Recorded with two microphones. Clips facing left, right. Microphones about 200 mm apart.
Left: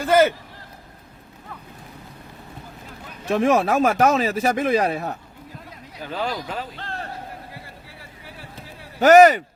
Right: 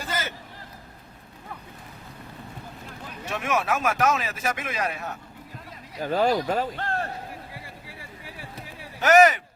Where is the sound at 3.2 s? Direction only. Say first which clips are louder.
Left 8 dB; 35° left (ahead or behind).